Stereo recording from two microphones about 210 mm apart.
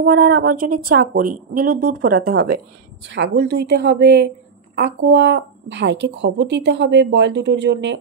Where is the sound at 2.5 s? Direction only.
55° right (ahead or behind).